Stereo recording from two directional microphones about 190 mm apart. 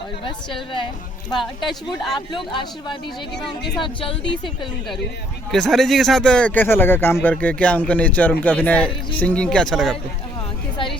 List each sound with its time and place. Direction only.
0.3 s speech: 25° left (ahead or behind)
5.5 s speech: centre (ahead or behind)